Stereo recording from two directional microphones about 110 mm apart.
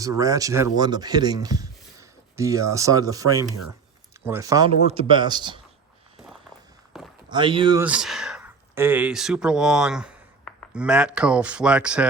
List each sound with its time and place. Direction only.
0.0 s speech: 30° right (ahead or behind)
0.8 s speech: 40° right (ahead or behind)
4.9 s speech: 55° right (ahead or behind)
6.9 s a sound: centre (ahead or behind)
7.3 s speech: 45° right (ahead or behind)
7.9 s speech: 5° right (ahead or behind)
8.4 s speech: 20° right (ahead or behind)